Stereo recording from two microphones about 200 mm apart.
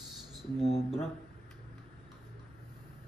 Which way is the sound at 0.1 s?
Centre (ahead or behind).